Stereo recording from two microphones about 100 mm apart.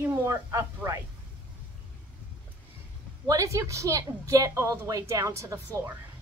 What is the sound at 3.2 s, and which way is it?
A woman's voice, 35° right (ahead or behind).